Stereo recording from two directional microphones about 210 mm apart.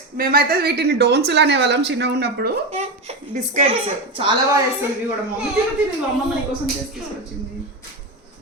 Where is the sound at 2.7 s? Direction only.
30° right (ahead or behind).